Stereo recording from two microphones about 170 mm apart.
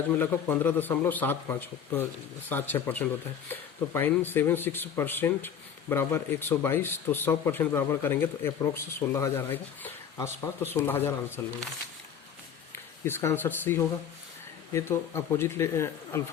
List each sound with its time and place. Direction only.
0.1 s speech: 15° left (ahead or behind)
12.7 s speech: 15° left (ahead or behind)